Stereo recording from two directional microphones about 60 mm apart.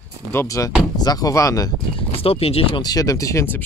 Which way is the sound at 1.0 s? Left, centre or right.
Left.